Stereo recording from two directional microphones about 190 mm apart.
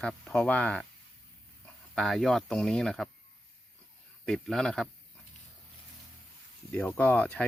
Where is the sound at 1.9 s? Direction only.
Centre (ahead or behind).